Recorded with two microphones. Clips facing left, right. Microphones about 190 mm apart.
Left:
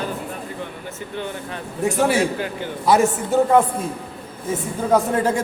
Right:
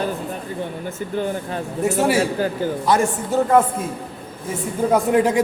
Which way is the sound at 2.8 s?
5° left (ahead or behind).